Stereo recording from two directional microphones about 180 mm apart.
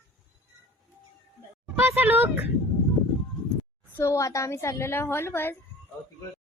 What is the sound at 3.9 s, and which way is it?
A woman's voice, 15° left (ahead or behind).